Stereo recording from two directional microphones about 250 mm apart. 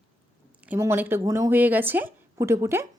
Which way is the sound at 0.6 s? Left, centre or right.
Centre.